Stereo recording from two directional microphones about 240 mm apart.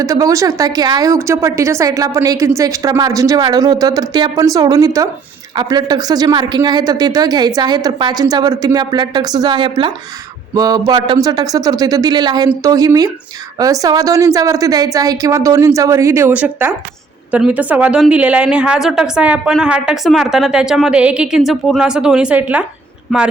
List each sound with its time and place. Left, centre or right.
0.0 s a woman's voice: centre